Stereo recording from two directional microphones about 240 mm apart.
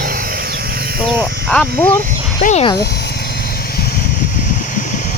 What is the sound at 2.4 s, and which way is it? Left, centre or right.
Speech, left.